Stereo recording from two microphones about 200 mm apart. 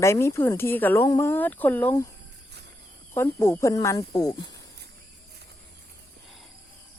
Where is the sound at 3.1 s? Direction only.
10° left (ahead or behind).